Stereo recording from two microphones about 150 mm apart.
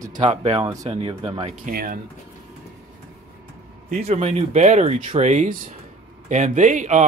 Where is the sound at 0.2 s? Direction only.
45° right (ahead or behind).